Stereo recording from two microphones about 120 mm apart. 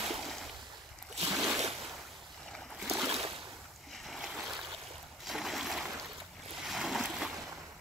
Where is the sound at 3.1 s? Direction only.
55° right (ahead or behind).